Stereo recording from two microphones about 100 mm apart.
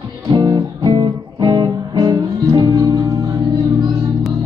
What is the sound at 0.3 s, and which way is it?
Music, 45° right (ahead or behind).